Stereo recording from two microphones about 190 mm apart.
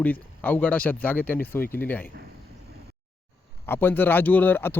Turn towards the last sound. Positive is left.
turn(degrees=10)  # may be behind; listen again after turning